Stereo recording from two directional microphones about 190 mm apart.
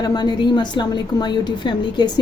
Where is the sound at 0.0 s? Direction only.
20° left (ahead or behind).